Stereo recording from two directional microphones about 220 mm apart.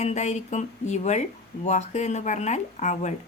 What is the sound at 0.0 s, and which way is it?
Speech, 30° left (ahead or behind).